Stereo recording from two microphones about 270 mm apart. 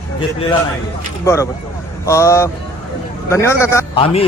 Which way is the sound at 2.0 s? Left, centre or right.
Centre.